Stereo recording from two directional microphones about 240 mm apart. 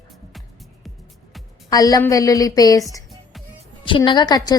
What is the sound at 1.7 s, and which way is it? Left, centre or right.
A woman's voice, centre.